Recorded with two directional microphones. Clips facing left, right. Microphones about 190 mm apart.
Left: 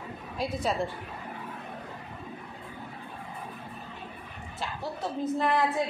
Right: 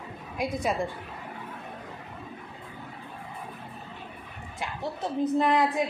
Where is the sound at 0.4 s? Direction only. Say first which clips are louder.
Right 1 dB; 15° right (ahead or behind).